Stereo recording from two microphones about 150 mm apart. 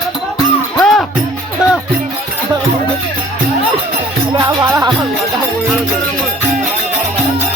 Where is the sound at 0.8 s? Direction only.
5° left (ahead or behind).